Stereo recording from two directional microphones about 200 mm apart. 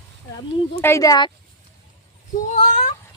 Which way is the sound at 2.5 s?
40° left (ahead or behind).